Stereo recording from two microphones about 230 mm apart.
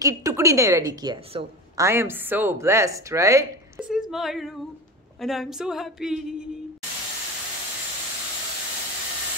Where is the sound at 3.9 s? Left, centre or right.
Centre.